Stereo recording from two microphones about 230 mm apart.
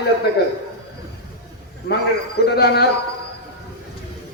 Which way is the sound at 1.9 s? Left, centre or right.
Left.